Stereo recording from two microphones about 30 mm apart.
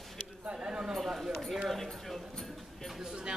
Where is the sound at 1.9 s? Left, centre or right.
Centre.